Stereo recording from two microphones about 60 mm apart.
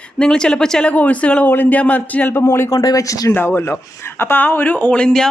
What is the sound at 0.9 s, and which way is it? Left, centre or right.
A woman's voice, left.